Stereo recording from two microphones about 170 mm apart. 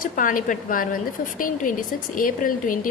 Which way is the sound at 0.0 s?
50° left (ahead or behind).